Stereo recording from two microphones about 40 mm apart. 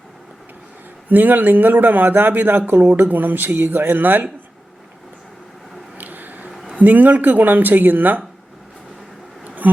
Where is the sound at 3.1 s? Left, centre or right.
Right.